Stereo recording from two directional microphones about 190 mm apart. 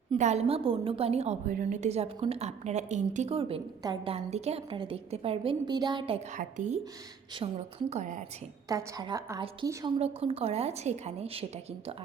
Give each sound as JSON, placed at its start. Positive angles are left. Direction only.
{"t": 0.1, "sound": "a woman's voice", "side_deg": -35}
{"t": 6.3, "sound": "a woman's voice", "side_deg": -40}
{"t": 8.7, "sound": "a woman's voice", "side_deg": -20}
{"t": 10.0, "sound": "a woman's voice", "side_deg": -30}